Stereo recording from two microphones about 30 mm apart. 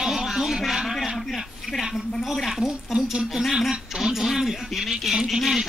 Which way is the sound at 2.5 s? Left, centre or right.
Centre.